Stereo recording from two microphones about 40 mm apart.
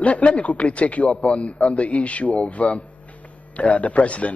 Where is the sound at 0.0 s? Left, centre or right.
Left.